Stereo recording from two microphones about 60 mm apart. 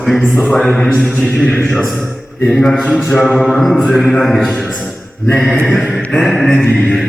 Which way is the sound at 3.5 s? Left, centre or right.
Centre.